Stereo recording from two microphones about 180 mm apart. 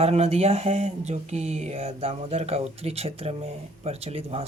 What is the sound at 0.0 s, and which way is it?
Speech, 35° right (ahead or behind).